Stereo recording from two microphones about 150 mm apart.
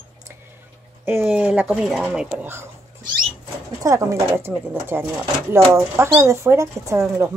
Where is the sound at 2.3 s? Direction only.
15° right (ahead or behind).